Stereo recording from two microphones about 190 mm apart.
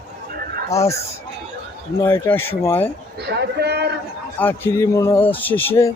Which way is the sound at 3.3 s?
60° right (ahead or behind).